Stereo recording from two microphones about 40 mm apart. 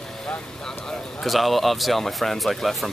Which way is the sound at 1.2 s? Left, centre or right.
Centre.